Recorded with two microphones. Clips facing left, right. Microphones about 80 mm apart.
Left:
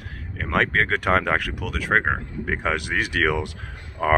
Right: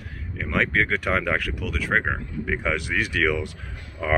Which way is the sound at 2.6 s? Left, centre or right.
Left.